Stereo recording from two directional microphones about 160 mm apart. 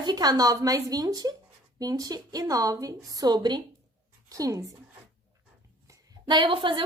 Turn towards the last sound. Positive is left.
turn(degrees=-30)  # may be behind; listen again after turning